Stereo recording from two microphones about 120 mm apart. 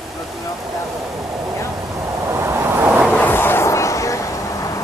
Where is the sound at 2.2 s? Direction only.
20° right (ahead or behind).